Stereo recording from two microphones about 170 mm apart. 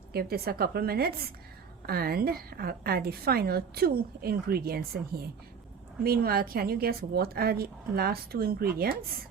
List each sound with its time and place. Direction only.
0.1 s a woman's voice: 65° right (ahead or behind)